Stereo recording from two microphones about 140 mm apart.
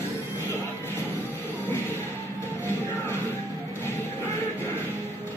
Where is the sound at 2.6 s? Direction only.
15° left (ahead or behind).